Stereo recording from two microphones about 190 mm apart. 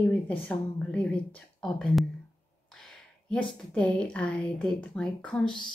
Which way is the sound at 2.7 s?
5° left (ahead or behind).